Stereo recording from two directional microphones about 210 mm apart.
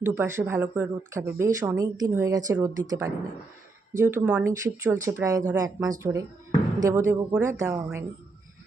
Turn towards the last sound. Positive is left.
turn(degrees=-15)  # may be behind; listen again after turning